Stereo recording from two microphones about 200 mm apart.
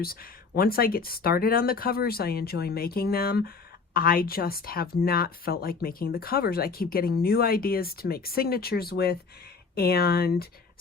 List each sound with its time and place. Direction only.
0.0 s speech: 50° left (ahead or behind)